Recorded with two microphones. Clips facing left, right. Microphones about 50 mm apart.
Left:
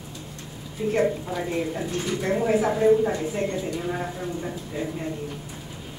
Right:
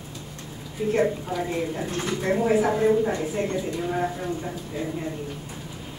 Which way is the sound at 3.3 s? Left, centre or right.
Centre.